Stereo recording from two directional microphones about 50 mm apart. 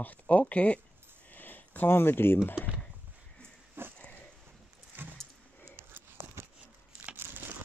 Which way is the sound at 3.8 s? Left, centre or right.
Right.